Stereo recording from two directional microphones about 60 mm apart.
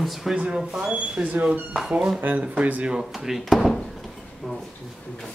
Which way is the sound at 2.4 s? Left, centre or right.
Right.